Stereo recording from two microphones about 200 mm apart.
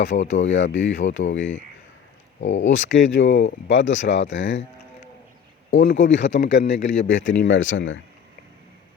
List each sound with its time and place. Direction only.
0.2 s speech: 70° left (ahead or behind)
1.4 s a man's voice: 35° left (ahead or behind)
2.4 s speech: 70° left (ahead or behind)
5.7 s speech: 65° left (ahead or behind)
6.2 s a man's voice: 40° left (ahead or behind)
7.0 s speech: 70° left (ahead or behind)